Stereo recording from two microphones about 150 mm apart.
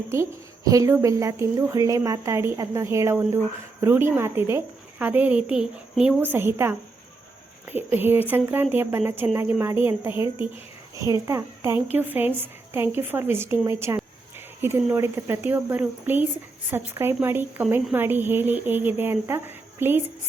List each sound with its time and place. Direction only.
0.1 s a woman's voice: 20° right (ahead or behind)